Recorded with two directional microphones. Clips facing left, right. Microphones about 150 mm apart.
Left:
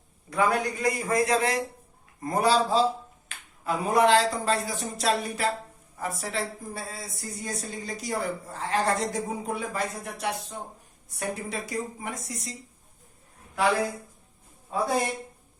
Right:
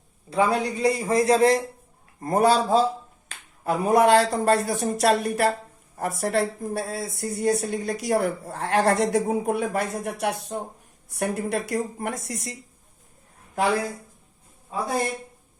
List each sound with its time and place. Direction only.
0.3 s a man's voice: 30° right (ahead or behind)
2.2 s a man's voice: 50° right (ahead or behind); by 12.5 s 65° right (ahead or behind)